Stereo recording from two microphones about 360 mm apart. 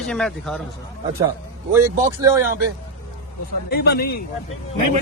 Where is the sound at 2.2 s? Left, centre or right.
Centre.